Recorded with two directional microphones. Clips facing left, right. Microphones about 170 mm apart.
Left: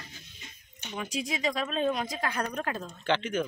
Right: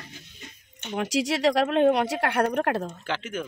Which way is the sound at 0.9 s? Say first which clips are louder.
Right 8 dB; 80° right.